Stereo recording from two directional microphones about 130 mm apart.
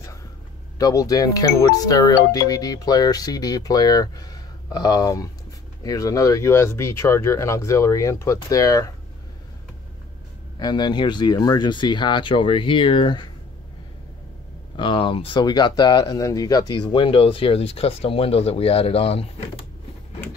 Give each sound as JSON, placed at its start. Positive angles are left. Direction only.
{"t": 0.7, "sound": "speech", "side_deg": 25}
{"t": 10.6, "sound": "speech", "side_deg": 35}
{"t": 14.8, "sound": "speech", "side_deg": 40}